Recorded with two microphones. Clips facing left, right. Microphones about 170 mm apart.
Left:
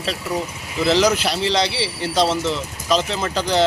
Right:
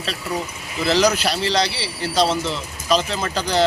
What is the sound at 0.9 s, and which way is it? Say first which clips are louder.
Speech: right 2 dB; 20° left (ahead or behind).